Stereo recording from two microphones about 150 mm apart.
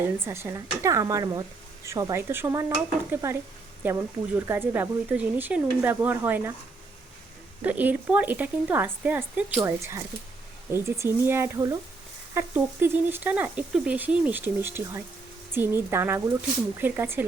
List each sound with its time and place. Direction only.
0.0 s speech: 15° right (ahead or behind)
7.6 s speech: 10° right (ahead or behind)